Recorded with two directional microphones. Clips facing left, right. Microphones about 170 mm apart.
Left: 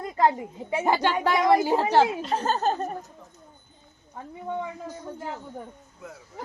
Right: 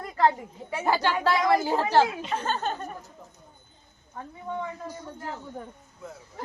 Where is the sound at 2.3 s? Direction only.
40° left (ahead or behind).